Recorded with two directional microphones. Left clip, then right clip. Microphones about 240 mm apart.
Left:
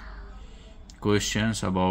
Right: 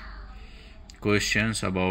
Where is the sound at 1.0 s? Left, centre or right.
Centre.